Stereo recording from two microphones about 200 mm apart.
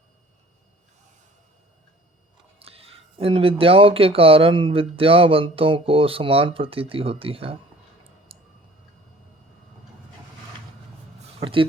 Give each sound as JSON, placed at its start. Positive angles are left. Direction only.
{"t": 2.6, "sound": "speech", "side_deg": -30}
{"t": 8.3, "sound": "a sound", "side_deg": -30}
{"t": 11.3, "sound": "speech", "side_deg": -25}